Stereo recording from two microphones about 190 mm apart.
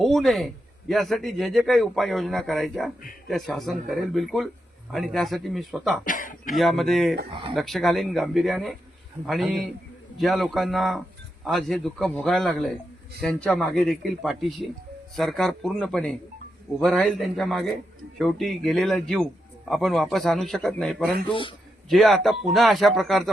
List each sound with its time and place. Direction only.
0.0 s a man's voice: centre (ahead or behind)
6.1 s speech: 45° left (ahead or behind)
6.6 s a man's voice: centre (ahead or behind)